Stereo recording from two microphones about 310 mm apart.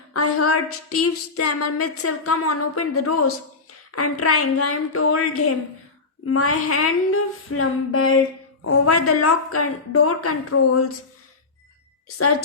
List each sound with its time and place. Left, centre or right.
0.1 s a woman's voice: left